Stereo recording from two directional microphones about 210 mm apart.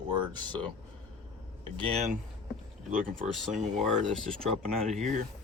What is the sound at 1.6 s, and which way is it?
Speech, 25° right (ahead or behind).